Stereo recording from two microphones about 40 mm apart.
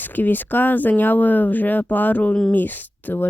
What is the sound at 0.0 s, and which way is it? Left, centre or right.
Speech, left.